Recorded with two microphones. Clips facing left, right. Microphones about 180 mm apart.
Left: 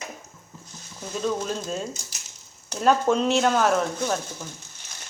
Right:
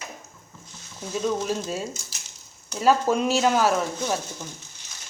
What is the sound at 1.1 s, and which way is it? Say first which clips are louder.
Speech: right 1 dB; 5° right (ahead or behind).